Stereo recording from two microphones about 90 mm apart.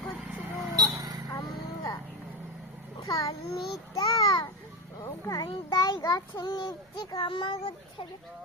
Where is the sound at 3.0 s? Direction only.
45° left (ahead or behind).